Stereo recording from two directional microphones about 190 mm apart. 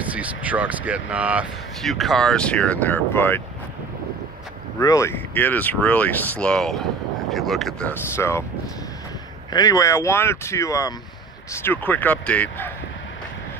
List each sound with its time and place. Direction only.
0.0 s speech: 10° right (ahead or behind); by 3.4 s 10° left (ahead or behind)
4.7 s speech: 15° left (ahead or behind)
9.5 s speech: 20° left (ahead or behind)